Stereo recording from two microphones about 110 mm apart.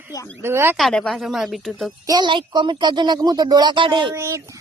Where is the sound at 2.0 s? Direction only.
35° right (ahead or behind).